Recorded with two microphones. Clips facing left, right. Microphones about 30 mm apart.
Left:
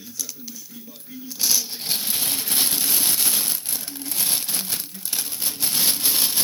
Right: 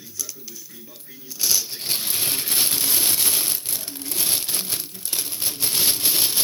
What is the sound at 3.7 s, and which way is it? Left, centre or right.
Crumpling, right.